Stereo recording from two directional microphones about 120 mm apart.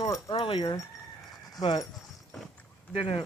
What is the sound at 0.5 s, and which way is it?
Speech, 35° left (ahead or behind).